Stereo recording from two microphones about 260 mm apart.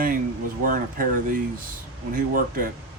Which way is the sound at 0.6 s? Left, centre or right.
Right.